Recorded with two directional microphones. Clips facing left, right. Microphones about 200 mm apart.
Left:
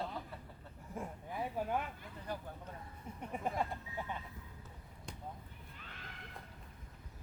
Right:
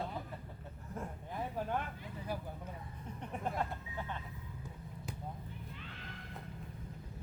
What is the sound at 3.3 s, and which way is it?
Speech, 5° left (ahead or behind).